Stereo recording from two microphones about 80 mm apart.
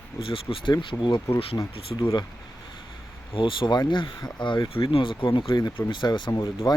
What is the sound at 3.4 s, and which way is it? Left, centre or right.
Speech, left.